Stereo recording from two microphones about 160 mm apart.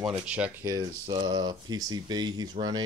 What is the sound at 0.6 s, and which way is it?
Speech, 20° right (ahead or behind).